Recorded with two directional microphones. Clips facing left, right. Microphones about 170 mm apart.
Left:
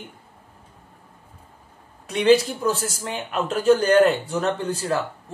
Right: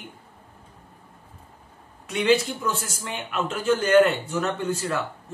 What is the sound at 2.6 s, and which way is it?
Speech, 35° left (ahead or behind).